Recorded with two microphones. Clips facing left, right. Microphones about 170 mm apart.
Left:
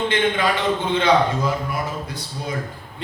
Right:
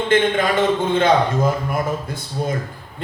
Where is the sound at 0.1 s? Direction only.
50° right (ahead or behind).